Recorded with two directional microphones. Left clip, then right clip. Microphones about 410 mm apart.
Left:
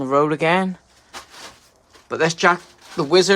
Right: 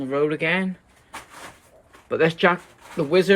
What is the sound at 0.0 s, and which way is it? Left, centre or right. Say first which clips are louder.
Speech: left 5 dB; centre.